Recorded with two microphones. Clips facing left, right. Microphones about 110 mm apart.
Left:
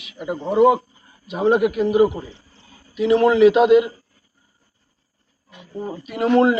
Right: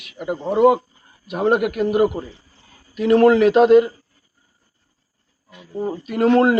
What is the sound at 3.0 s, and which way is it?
Speech, 45° right (ahead or behind).